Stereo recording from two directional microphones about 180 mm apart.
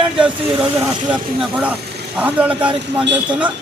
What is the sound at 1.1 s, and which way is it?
A man's voice, 5° right (ahead or behind).